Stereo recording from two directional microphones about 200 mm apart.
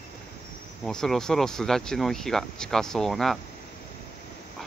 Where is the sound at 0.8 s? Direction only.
Centre (ahead or behind).